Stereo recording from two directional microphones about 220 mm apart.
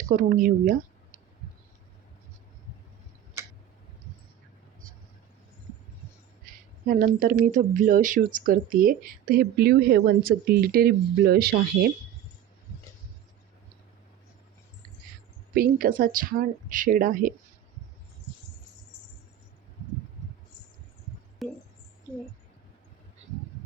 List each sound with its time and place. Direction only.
0.1 s speech: 40° right (ahead or behind)
6.4 s speech: 40° right (ahead or behind)
15.5 s speech: 40° right (ahead or behind)
21.4 s a sound: centre (ahead or behind)